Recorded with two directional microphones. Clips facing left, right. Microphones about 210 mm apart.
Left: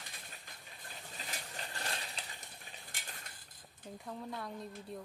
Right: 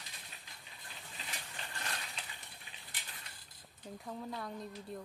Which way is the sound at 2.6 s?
45° left (ahead or behind).